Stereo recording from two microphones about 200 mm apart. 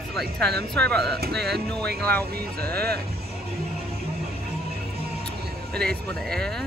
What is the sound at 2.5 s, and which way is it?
Speech, 50° right (ahead or behind).